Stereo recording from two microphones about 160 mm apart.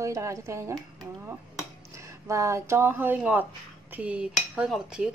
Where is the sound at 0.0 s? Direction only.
20° right (ahead or behind).